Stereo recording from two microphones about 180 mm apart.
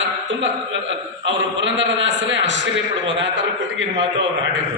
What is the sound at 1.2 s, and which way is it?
A man's voice, 90° right.